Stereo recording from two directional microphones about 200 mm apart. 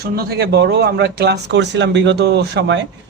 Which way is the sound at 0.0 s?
50° right (ahead or behind).